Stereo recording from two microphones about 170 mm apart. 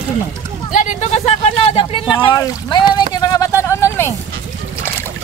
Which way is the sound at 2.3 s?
20° left (ahead or behind).